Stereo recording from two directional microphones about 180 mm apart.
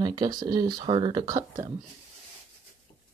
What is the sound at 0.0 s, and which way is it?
Speech, 20° right (ahead or behind).